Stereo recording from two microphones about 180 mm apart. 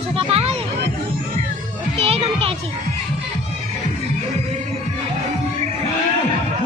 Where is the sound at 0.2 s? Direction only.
35° right (ahead or behind).